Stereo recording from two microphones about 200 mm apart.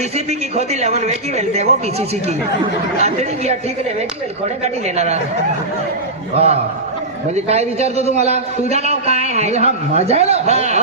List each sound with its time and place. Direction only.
0.3 s a man's voice: 30° right (ahead or behind)
4.6 s a man's voice: 35° right (ahead or behind)
6.3 s a man's voice: 30° right (ahead or behind)